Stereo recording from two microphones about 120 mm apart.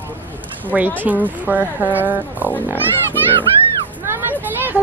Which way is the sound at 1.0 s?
15° right (ahead or behind).